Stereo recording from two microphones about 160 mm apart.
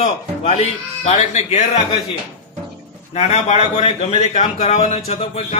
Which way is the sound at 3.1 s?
45° left (ahead or behind).